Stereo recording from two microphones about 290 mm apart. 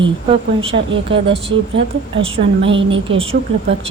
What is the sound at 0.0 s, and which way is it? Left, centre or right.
Speech, centre.